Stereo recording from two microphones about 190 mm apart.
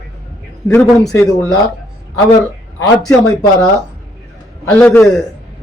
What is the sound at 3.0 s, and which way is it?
Speech, 20° left (ahead or behind).